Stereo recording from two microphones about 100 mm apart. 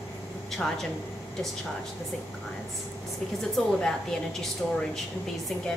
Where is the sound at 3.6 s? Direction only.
5° left (ahead or behind).